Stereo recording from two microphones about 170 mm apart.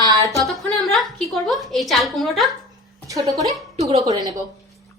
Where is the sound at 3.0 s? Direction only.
20° right (ahead or behind).